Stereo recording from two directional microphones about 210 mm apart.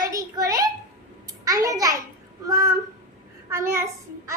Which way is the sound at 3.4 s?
15° right (ahead or behind).